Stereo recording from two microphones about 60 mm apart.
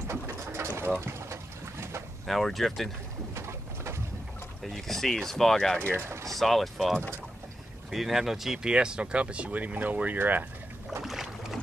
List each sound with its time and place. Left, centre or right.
0.1 s pigeon: right
1.0 s boat: right
2.2 s speech: centre
3.3 s bird: right
4.6 s speech: centre
8.6 s speech: centre
11.0 s boat: centre